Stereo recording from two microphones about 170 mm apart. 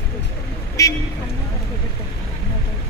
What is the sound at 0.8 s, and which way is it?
Vehicle, 20° left (ahead or behind).